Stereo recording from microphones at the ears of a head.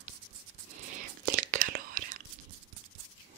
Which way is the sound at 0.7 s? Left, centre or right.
Right.